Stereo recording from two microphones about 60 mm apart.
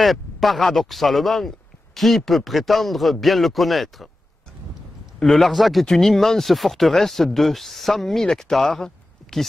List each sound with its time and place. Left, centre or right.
0.0 s speech: centre
5.2 s speech: centre